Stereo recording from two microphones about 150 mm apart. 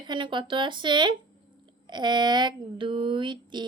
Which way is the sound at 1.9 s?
30° right (ahead or behind).